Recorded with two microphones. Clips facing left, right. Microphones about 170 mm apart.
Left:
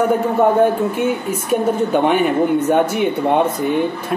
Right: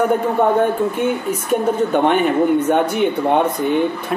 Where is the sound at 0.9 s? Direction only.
5° left (ahead or behind).